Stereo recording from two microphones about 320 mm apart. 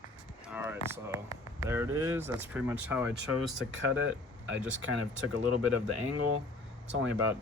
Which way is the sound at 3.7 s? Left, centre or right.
Right.